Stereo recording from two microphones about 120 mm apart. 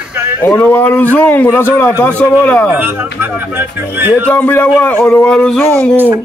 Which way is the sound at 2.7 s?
15° right (ahead or behind).